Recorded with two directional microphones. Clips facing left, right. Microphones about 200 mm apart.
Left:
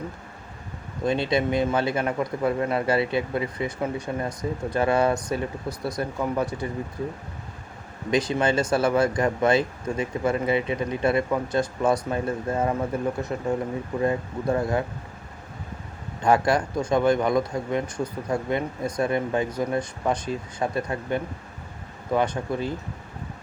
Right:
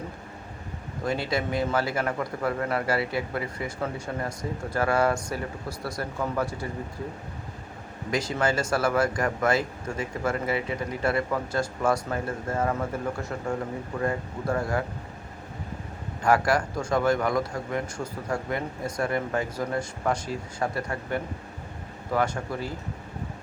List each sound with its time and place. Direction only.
1.0 s a man's voice: 20° left (ahead or behind)
8.1 s a man's voice: 20° left (ahead or behind)
16.2 s a man's voice: 20° left (ahead or behind)